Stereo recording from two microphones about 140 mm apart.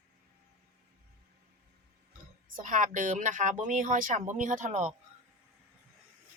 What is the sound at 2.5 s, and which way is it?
Speech, 70° right (ahead or behind).